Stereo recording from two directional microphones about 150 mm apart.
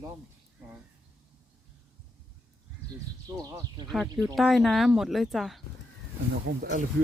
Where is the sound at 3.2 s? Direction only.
25° right (ahead or behind).